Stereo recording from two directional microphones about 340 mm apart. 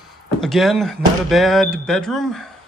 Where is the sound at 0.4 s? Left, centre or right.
Centre.